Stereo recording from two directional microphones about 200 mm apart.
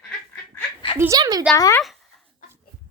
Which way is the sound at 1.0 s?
15° right (ahead or behind).